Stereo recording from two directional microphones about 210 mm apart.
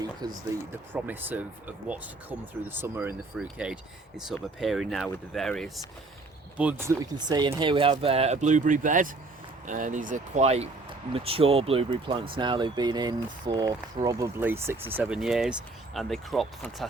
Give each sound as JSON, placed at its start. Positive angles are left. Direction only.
{"t": 0.0, "sound": "speech", "side_deg": -20}
{"t": 0.9, "sound": "speech", "side_deg": -10}